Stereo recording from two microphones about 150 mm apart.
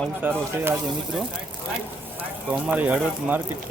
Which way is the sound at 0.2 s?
15° right (ahead or behind).